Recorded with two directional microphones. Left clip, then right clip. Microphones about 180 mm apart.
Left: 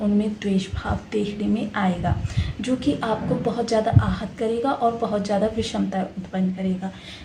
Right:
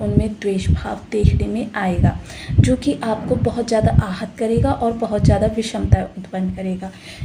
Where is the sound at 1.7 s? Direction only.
40° right (ahead or behind).